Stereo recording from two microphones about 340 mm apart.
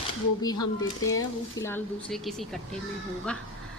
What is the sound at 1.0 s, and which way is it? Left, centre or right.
Speech, left.